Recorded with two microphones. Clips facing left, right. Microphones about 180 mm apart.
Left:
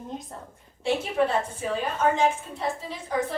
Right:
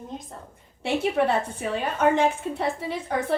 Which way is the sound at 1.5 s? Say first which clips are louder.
Right 1 dB; 65° right (ahead or behind).